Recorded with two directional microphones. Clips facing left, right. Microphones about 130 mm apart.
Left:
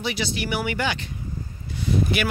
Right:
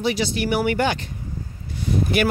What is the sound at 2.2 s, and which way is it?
Speech, 45° right (ahead or behind).